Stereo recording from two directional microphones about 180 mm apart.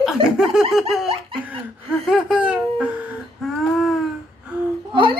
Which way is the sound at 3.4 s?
Centre (ahead or behind).